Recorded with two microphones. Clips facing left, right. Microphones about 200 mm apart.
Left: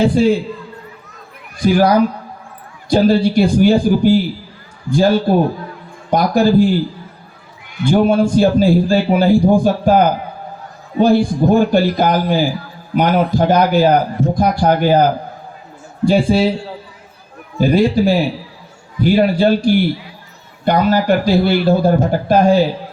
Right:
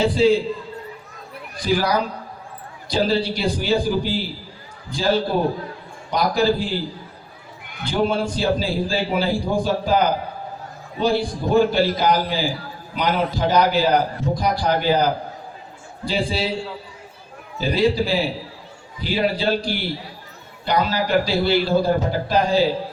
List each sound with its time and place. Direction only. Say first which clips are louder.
0.0 s a man's voice: left 4 dB; 50° left (ahead or behind)
1.6 s a man's voice: left 8 dB; 50° left (ahead or behind)
7.9 s a man's voice: left 8 dB; 50° left (ahead or behind)
17.6 s a man's voice: left 6 dB; 50° left (ahead or behind)